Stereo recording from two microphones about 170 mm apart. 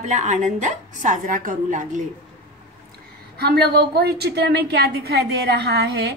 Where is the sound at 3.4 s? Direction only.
70° right (ahead or behind).